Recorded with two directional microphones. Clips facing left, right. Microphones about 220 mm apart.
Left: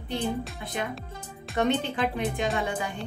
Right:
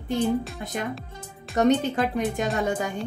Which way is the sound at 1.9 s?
45° right (ahead or behind).